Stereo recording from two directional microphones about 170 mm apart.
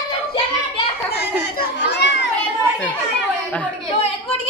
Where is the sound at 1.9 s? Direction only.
90° left.